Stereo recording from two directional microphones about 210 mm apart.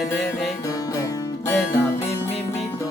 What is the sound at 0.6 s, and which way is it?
Music, 15° left (ahead or behind).